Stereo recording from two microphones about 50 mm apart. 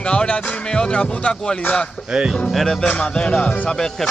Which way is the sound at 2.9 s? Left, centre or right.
Left.